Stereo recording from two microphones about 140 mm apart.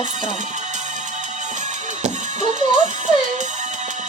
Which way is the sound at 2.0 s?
55° right (ahead or behind).